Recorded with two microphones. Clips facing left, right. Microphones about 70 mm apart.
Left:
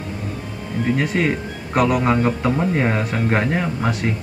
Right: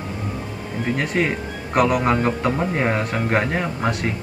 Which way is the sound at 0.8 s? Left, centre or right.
Centre.